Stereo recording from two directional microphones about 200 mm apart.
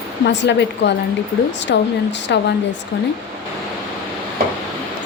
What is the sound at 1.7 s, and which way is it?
Speech, 60° left (ahead or behind).